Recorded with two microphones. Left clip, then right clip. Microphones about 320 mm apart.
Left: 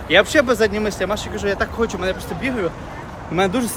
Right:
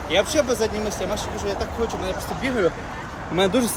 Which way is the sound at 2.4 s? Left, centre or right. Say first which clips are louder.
Right 1 dB; centre.